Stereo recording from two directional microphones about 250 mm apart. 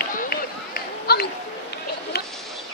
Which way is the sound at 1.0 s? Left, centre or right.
Left.